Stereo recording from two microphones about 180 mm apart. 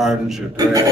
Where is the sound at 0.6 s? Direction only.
20° right (ahead or behind).